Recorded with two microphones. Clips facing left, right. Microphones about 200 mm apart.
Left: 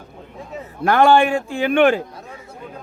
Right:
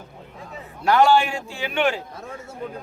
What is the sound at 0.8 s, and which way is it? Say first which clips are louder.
A man's voice: left 3 dB; 55° left (ahead or behind).